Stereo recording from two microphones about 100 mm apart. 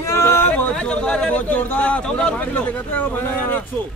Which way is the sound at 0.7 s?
10° left (ahead or behind).